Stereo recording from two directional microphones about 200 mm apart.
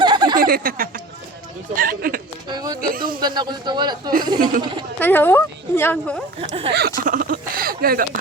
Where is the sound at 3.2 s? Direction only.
20° right (ahead or behind).